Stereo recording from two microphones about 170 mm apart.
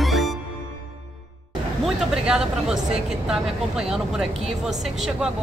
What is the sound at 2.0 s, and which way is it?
Speech, 5° right (ahead or behind).